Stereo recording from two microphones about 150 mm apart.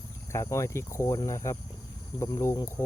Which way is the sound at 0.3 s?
20° left (ahead or behind).